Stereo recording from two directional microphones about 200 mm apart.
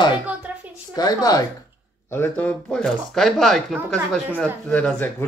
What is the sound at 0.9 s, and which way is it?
A woman's voice, 20° left (ahead or behind).